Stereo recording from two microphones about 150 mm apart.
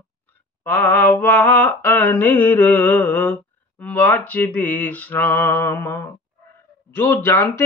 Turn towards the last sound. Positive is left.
turn(degrees=15)  # may be behind; listen again after turning